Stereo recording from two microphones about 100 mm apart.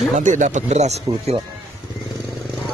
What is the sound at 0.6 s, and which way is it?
Speech, 90° right.